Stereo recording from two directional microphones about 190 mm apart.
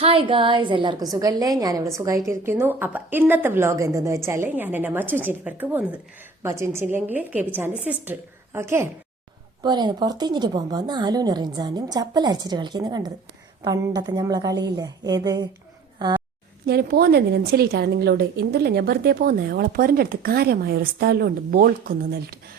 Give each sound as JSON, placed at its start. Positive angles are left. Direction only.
{"t": 0.0, "sound": "a woman's voice", "side_deg": -30}
{"t": 16.6, "sound": "a woman's voice", "side_deg": -55}